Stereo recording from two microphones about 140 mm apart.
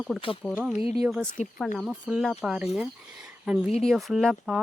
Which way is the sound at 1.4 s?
55° left (ahead or behind).